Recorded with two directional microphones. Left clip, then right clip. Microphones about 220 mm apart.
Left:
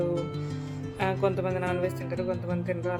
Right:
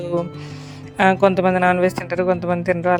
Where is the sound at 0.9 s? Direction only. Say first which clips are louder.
Right 13 dB; 45° right (ahead or behind).